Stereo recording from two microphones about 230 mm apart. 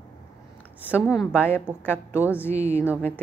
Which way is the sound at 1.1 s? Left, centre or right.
Centre.